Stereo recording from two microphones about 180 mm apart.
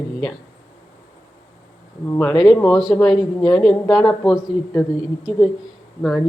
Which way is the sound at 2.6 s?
Centre (ahead or behind).